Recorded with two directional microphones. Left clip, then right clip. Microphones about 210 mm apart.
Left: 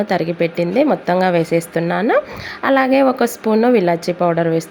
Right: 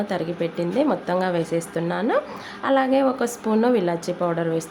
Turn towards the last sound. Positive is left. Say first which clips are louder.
# left 7 dB
turn(degrees=20)  # may be behind; listen again after turning